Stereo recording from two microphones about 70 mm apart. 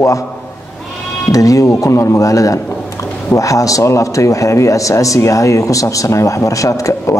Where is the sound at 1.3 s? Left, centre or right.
Left.